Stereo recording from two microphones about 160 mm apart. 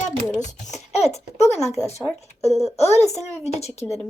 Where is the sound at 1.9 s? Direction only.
40° left (ahead or behind).